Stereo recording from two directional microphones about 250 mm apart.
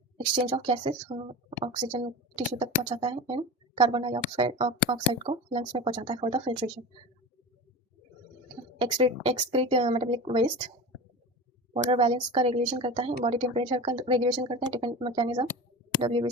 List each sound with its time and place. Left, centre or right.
0.3 s speech: right
8.8 s speech: right
11.7 s speech: right